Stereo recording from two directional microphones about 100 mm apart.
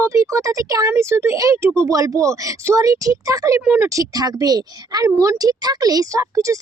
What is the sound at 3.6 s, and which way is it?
Speech, 20° right (ahead or behind).